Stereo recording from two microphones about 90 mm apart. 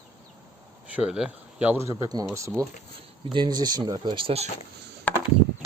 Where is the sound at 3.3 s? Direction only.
55° right (ahead or behind).